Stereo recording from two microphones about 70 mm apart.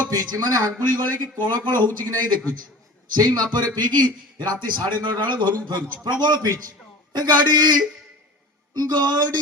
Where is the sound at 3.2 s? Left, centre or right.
Right.